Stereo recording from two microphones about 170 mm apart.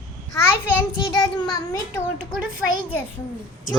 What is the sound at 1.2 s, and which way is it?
Speech, 25° left (ahead or behind).